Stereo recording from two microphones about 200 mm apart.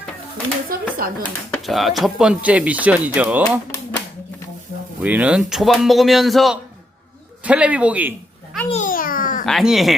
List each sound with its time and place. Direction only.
0.7 s speech: 45° right (ahead or behind)
1.2 s speech: centre (ahead or behind)
4.9 s speech: 10° right (ahead or behind)
8.7 s babbling: 40° left (ahead or behind)
9.5 s speech: centre (ahead or behind)